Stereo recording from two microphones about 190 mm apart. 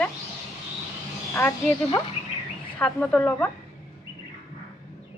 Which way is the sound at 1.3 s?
10° left (ahead or behind).